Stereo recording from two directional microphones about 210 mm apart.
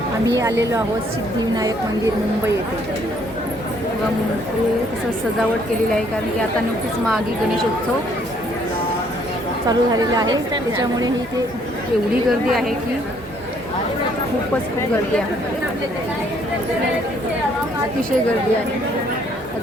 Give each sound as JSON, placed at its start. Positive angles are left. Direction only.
{"t": 9.6, "sound": "a woman's voice", "side_deg": -20}
{"t": 12.5, "sound": "a woman's voice", "side_deg": 0}